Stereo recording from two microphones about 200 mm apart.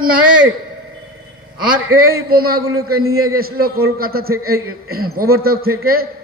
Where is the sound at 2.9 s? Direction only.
90° right.